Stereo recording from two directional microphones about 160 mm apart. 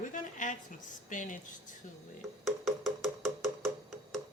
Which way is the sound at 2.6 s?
Centre (ahead or behind).